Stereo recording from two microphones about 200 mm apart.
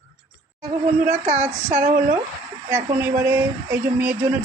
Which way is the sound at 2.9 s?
10° right (ahead or behind).